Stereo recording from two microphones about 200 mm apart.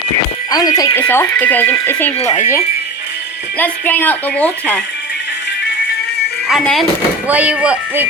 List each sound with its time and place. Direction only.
0.5 s speech: 20° left (ahead or behind)
2.1 s speech: 30° left (ahead or behind)
3.6 s speech: 10° left (ahead or behind)
6.5 s speech: centre (ahead or behind)